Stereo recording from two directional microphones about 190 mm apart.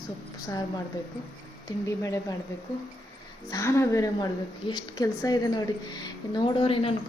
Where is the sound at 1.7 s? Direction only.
15° left (ahead or behind).